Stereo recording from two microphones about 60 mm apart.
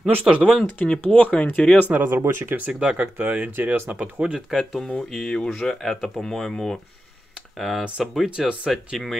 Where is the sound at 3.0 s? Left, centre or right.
Right.